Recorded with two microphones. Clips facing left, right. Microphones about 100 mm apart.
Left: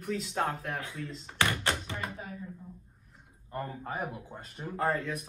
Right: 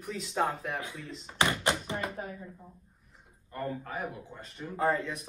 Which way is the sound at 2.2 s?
45° right (ahead or behind).